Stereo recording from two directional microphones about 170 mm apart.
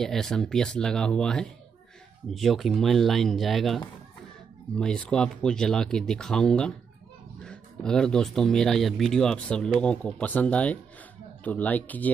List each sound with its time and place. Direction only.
0.0 s speech: 5° left (ahead or behind)